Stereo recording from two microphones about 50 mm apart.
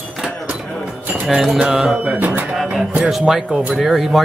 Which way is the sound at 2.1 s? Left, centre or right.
Right.